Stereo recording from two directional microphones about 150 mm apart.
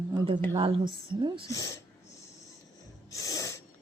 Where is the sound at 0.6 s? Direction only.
35° right (ahead or behind).